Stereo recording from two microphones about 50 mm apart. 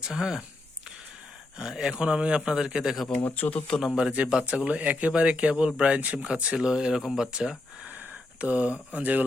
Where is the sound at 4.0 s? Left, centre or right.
Right.